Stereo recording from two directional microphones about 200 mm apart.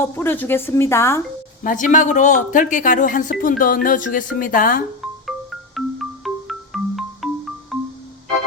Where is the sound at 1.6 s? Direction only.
40° left (ahead or behind).